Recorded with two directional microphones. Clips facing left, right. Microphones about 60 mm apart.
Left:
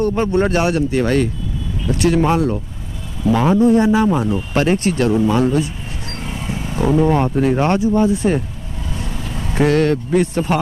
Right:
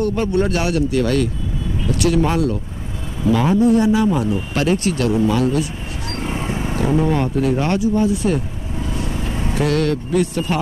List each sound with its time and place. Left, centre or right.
0.0 s speech: left
6.1 s vehicle: right
6.8 s speech: left
9.1 s vehicle: centre
9.6 s speech: left